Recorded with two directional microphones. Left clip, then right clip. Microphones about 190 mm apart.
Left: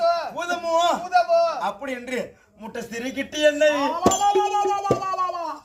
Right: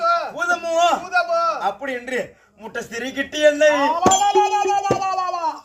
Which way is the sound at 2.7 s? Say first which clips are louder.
Right 4 dB; 15° left (ahead or behind).